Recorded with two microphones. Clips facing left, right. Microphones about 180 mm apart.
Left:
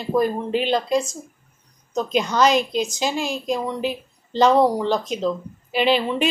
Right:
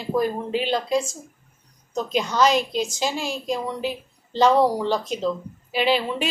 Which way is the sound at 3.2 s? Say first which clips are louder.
Left 3 dB; 50° left (ahead or behind).